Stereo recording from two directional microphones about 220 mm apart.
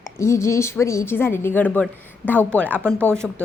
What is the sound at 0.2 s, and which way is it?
A woman's voice, 10° left (ahead or behind).